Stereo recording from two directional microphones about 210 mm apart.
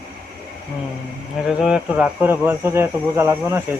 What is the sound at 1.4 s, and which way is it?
Speech, 5° right (ahead or behind).